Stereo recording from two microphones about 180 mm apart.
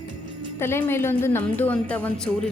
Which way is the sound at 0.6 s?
15° left (ahead or behind).